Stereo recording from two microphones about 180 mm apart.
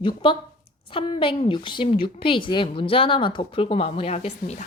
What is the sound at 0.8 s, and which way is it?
Speech, 30° left (ahead or behind).